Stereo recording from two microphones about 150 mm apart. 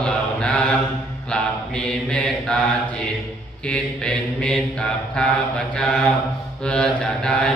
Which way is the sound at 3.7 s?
5° left (ahead or behind).